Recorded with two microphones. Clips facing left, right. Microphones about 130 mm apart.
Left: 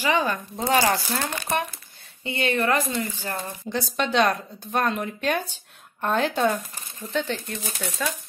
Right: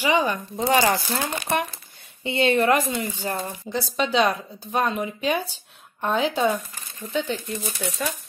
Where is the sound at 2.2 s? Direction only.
20° right (ahead or behind).